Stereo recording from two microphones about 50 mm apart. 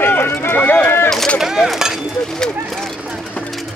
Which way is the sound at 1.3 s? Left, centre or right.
Centre.